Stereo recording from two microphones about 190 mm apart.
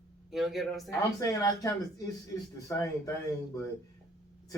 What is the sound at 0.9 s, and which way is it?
Speech, 15° left (ahead or behind).